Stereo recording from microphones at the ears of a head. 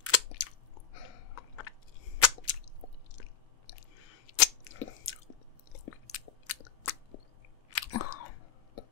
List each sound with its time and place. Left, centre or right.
0.0 s chewing: left